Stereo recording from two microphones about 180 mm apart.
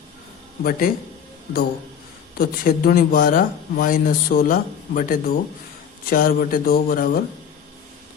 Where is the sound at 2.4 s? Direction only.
55° left (ahead or behind).